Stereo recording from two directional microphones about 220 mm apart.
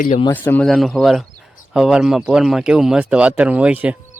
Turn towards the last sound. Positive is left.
turn(degrees=-5)  # may be behind; listen again after turning